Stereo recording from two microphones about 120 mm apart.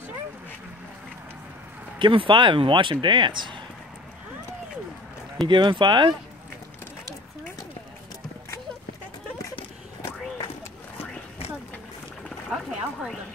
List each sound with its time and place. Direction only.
2.0 s speech: 45° right (ahead or behind)
5.5 s speech: 40° right (ahead or behind)
12.4 s a sound: centre (ahead or behind)